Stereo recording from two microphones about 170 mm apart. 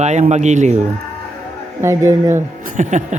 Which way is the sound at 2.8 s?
45° right (ahead or behind).